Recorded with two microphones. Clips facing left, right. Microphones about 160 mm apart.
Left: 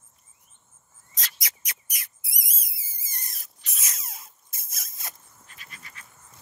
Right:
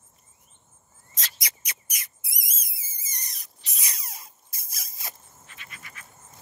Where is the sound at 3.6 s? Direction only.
Centre (ahead or behind).